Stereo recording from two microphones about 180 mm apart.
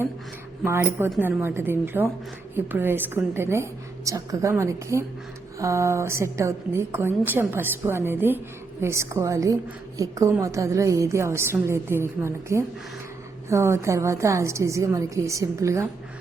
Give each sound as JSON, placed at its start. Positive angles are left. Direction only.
{"t": 0.6, "sound": "a woman's voice", "side_deg": -10}